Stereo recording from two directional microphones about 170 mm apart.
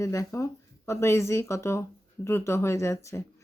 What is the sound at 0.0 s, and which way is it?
Speech, 20° left (ahead or behind).